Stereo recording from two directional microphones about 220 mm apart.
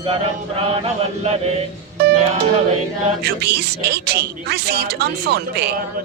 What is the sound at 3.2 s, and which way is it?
Chant, 45° right (ahead or behind).